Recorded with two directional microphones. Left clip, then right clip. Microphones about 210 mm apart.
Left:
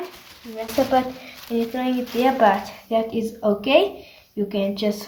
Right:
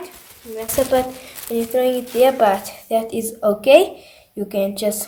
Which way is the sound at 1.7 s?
55° right (ahead or behind).